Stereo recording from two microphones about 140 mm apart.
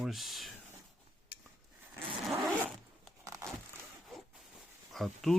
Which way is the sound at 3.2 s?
20° right (ahead or behind).